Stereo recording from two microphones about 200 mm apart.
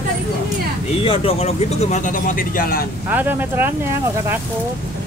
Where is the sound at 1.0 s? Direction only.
30° left (ahead or behind); by 2.8 s 45° left (ahead or behind).